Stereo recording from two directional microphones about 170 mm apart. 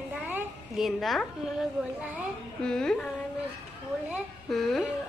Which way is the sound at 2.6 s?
5° left (ahead or behind).